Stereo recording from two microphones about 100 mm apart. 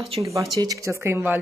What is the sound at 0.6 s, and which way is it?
Speech, 35° right (ahead or behind).